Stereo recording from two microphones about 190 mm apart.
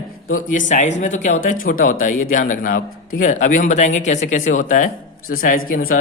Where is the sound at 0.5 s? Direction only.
40° left (ahead or behind).